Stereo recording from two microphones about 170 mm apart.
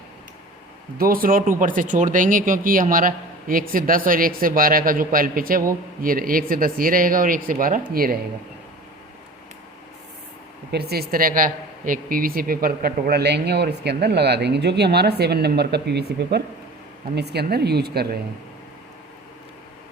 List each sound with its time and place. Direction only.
0.9 s speech: 60° right (ahead or behind)
10.7 s speech: 70° right (ahead or behind)